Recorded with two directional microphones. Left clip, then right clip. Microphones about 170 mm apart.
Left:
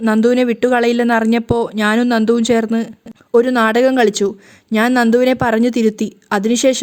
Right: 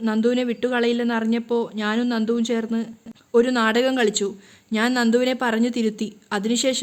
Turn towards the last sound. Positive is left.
turn(degrees=35)  # may be behind; listen again after turning